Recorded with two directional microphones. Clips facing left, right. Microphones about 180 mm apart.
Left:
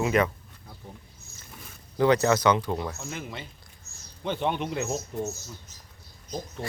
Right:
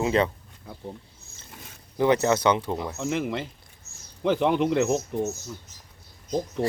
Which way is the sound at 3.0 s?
90° right.